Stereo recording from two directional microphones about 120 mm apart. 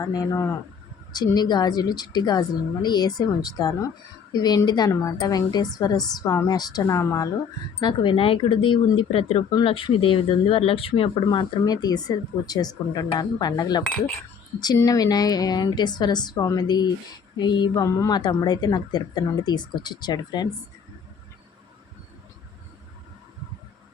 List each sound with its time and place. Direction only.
0.0 s a woman's voice: 30° left (ahead or behind)
6.8 s a woman's voice: 25° left (ahead or behind)
7.8 s a woman's voice: 40° left (ahead or behind)
17.8 s a woman's voice: 25° left (ahead or behind)
18.2 s a woman's voice: 35° left (ahead or behind)